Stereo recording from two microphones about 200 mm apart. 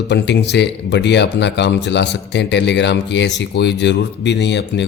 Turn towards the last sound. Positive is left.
turn(degrees=60)  # may be behind; listen again after turning